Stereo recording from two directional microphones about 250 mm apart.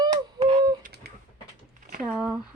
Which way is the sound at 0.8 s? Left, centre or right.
Right.